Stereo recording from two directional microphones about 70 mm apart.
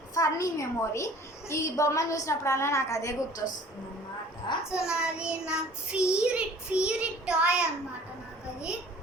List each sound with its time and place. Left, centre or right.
0.1 s a woman's voice: left
4.7 s child singing: centre